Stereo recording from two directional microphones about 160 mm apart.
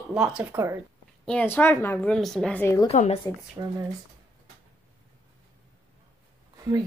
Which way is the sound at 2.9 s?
40° left (ahead or behind).